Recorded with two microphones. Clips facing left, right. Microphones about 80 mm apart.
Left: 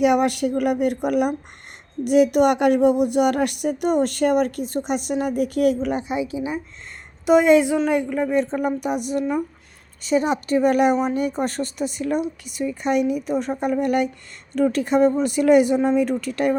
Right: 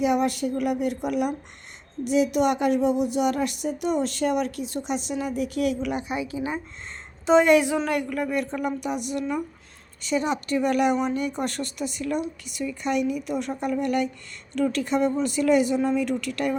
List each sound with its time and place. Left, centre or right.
0.0 s a woman's voice: left
6.1 s a woman's voice: centre
8.8 s speech: left